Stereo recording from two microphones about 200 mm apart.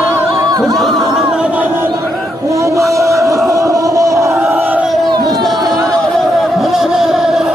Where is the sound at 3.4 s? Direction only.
15° right (ahead or behind).